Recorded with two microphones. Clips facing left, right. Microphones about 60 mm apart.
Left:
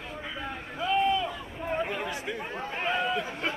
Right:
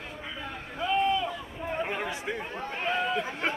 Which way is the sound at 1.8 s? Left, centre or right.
Centre.